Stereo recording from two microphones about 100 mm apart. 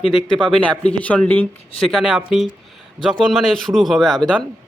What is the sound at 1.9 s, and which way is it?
A man's voice, 5° right (ahead or behind).